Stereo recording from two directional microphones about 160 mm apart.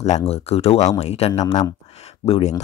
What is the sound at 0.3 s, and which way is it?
Speech, 40° left (ahead or behind).